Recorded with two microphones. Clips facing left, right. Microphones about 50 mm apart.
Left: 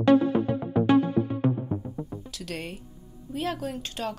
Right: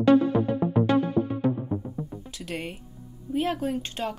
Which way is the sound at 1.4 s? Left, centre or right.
Left.